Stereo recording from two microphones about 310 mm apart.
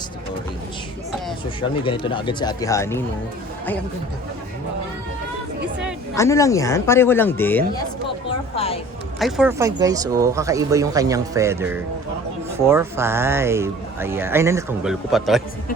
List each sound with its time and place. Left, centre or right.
1.8 s speech: centre
6.1 s speech: centre
8.5 s speech: centre
9.1 s speech: centre